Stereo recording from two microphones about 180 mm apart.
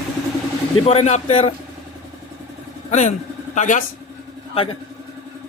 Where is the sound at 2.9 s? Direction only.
40° left (ahead or behind).